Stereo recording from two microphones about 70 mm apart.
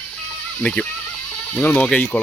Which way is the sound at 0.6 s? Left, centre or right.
Centre.